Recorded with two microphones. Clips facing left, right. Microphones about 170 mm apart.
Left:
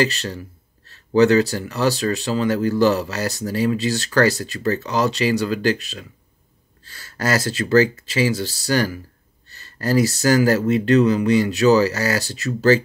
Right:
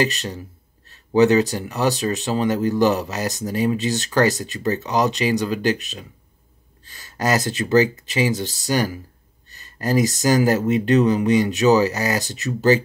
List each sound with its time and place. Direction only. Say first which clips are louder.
0.0 s speech: left 1 dB; 15° right (ahead or behind)